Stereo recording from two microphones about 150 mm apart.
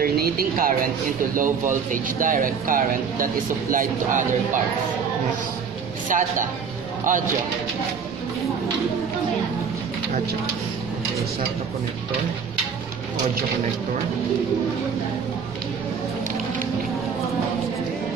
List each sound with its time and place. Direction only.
0.0 s speech: 80° right
1.3 s speech: 65° right (ahead or behind)
6.0 s speech: 60° right (ahead or behind)